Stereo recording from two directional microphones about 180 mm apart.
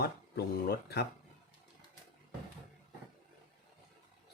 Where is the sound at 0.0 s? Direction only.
60° left (ahead or behind).